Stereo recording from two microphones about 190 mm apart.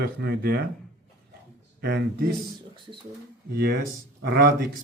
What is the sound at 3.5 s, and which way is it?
Speech, 55° right (ahead or behind).